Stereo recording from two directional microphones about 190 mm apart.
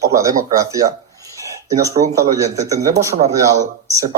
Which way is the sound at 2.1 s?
15° right (ahead or behind).